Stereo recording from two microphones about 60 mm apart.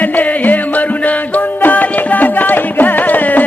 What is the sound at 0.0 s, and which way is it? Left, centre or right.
Music, left.